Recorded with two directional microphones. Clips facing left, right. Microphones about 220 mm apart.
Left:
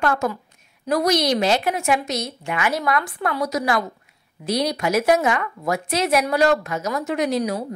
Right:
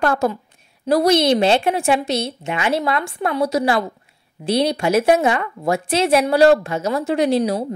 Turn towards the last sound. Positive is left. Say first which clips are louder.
# right 4 dB
turn(degrees=-30)  # may be behind; listen again after turning